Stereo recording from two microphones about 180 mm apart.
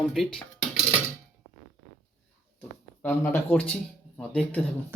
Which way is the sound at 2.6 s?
10° left (ahead or behind).